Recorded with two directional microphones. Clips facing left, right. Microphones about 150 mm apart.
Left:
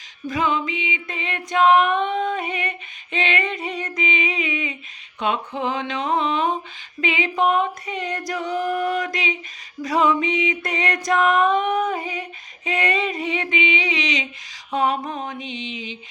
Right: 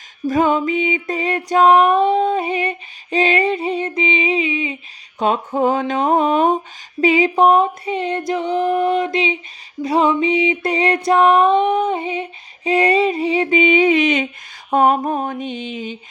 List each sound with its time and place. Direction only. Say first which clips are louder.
0.3 s music: right 7 dB; 45° right (ahead or behind); by 4.8 s 30° right (ahead or behind)
5.2 s speech: right 7 dB; 40° right (ahead or behind)
7.0 s a sound: right 8 dB; 35° right (ahead or behind); by 14.3 s 55° right (ahead or behind)
14.7 s speech: right 7 dB; 50° right (ahead or behind)